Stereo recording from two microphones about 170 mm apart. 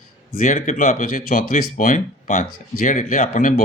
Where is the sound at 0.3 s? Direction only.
50° left (ahead or behind).